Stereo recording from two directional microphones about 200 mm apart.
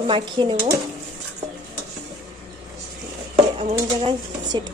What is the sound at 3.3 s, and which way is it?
Speech, 30° right (ahead or behind).